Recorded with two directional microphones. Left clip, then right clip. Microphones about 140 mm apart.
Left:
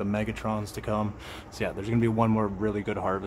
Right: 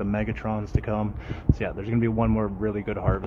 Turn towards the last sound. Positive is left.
turn(degrees=15)  # may be behind; listen again after turning